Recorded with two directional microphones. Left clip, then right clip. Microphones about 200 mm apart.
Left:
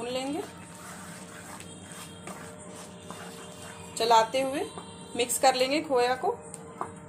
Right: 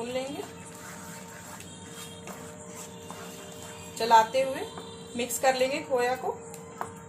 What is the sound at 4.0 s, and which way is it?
A woman's voice, 50° left (ahead or behind).